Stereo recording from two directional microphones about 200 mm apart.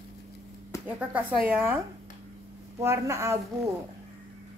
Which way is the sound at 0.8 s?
10° right (ahead or behind).